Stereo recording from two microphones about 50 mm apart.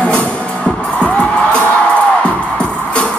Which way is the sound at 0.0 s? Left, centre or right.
Left.